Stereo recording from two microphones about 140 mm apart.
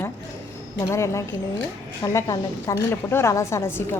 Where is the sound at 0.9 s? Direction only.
20° left (ahead or behind).